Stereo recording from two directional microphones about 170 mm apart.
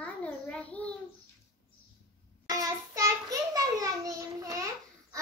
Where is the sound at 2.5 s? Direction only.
20° right (ahead or behind).